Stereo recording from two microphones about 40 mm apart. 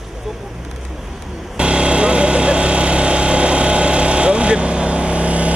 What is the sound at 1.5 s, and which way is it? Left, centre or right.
Vehicle, right.